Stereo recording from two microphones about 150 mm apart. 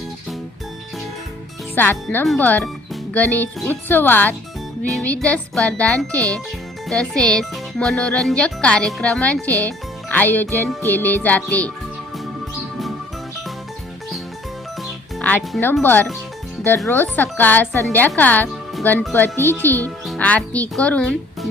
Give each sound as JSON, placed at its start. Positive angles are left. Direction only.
{"t": 1.7, "sound": "speech", "side_deg": 15}
{"t": 2.4, "sound": "music", "side_deg": 10}
{"t": 6.8, "sound": "speech", "side_deg": 5}
{"t": 9.5, "sound": "a child's voice", "side_deg": -20}
{"t": 10.1, "sound": "speech", "side_deg": 10}
{"t": 10.5, "sound": "music", "side_deg": 15}
{"t": 15.2, "sound": "speech", "side_deg": 10}
{"t": 15.8, "sound": "music", "side_deg": 10}
{"t": 18.2, "sound": "speech", "side_deg": 10}
{"t": 19.1, "sound": "music", "side_deg": 15}